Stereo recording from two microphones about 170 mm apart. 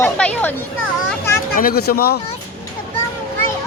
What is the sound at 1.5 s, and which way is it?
Speech, 60° left (ahead or behind).